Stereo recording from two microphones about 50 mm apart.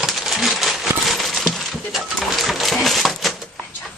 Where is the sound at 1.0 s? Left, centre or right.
Centre.